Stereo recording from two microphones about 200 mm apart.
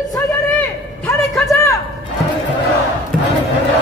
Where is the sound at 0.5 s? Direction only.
15° left (ahead or behind).